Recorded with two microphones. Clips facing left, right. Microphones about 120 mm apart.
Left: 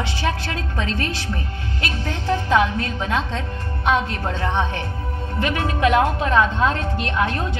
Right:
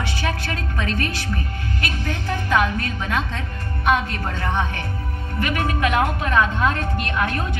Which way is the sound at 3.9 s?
55° right (ahead or behind).